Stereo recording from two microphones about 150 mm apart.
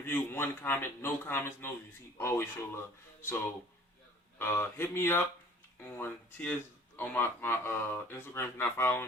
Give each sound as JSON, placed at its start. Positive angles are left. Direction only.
{"t": 0.0, "sound": "speech", "side_deg": 15}